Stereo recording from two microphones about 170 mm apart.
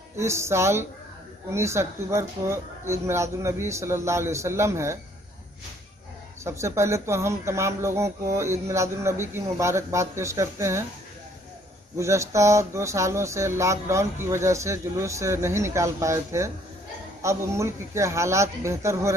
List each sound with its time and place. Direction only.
0.2 s speech: 15° right (ahead or behind)
6.4 s speech: 15° right (ahead or behind)
12.0 s speech: 15° right (ahead or behind)